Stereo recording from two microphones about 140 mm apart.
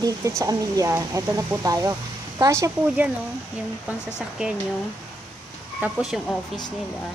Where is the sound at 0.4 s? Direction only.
25° right (ahead or behind).